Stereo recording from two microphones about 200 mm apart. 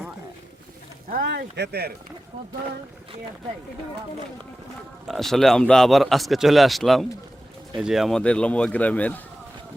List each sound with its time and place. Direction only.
1.1 s speech: 50° right (ahead or behind)
5.0 s a man's voice: centre (ahead or behind)